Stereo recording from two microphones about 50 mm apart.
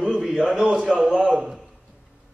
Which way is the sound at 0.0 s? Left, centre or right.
Centre.